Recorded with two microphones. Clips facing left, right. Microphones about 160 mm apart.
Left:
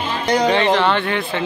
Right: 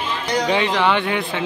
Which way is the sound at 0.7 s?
10° right (ahead or behind).